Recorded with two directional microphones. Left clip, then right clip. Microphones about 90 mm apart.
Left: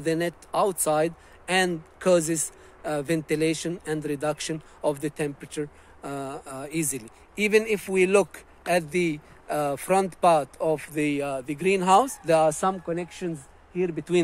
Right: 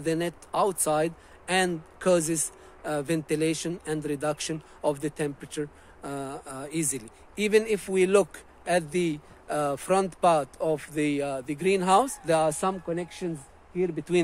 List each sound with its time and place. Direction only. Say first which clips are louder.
0.0 s speech: left 2 dB; 45° left (ahead or behind)
13.0 s speech: left 1 dB; 50° left (ahead or behind)